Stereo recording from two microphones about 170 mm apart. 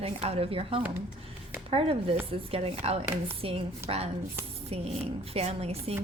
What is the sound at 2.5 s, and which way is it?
A woman's voice, 35° right (ahead or behind).